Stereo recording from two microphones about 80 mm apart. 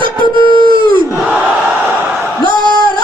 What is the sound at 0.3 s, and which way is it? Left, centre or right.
Howl, right.